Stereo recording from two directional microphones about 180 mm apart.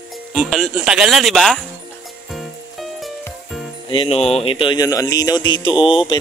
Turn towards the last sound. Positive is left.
turn(degrees=25)  # may be behind; listen again after turning